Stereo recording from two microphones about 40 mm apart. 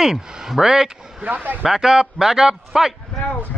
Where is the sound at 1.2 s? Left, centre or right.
Right.